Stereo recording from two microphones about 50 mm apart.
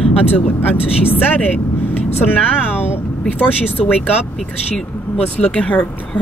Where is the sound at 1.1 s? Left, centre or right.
Left.